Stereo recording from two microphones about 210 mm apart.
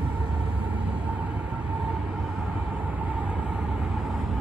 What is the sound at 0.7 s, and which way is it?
Vehicle, 5° right (ahead or behind).